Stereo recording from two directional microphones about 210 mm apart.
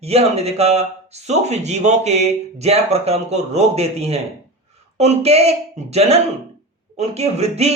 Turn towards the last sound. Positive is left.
turn(degrees=-30)  # may be behind; listen again after turning